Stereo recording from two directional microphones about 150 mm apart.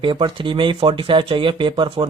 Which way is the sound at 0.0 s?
35° right (ahead or behind).